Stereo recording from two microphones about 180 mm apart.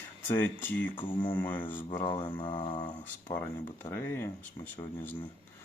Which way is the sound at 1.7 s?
30° left (ahead or behind).